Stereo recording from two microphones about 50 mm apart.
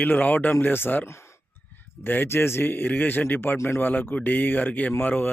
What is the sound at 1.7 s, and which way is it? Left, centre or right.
A man's voice, left.